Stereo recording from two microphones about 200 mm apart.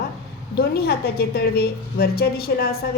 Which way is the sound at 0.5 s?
50° left (ahead or behind).